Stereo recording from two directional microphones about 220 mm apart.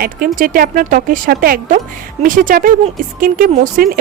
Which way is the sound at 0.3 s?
40° right (ahead or behind).